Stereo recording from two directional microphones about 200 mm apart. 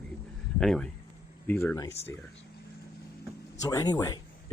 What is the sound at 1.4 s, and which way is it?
Speech, 10° left (ahead or behind).